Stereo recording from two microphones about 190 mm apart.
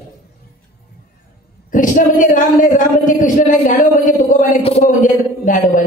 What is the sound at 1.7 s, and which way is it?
A man's voice, 45° left (ahead or behind).